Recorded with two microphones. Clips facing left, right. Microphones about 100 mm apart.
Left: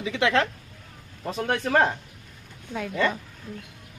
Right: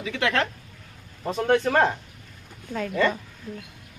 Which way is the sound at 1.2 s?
15° right (ahead or behind).